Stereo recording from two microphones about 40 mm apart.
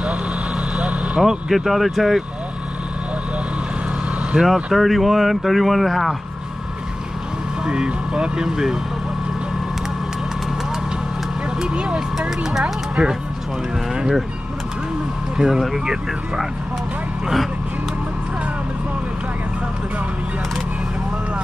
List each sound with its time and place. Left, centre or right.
0.8 s vehicle: right
1.5 s speech: centre
4.3 s speech: centre
7.6 s speech: right
11.6 s vehicle: right
12.2 s speech: centre
15.3 s speech: centre